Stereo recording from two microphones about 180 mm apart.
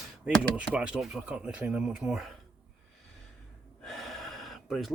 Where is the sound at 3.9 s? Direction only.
Centre (ahead or behind).